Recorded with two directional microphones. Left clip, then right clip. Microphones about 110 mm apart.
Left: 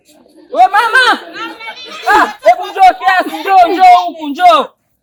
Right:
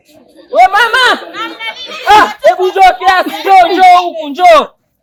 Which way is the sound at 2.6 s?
30° right (ahead or behind).